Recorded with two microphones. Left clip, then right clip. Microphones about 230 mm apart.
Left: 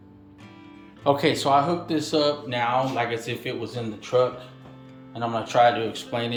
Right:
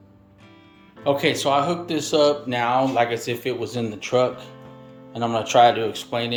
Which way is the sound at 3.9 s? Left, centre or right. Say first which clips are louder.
Right 1 dB; right.